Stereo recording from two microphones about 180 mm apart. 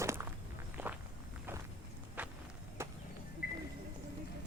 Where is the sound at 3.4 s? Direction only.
55° left (ahead or behind).